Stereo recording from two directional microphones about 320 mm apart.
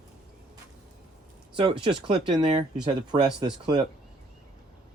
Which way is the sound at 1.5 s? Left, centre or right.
Centre.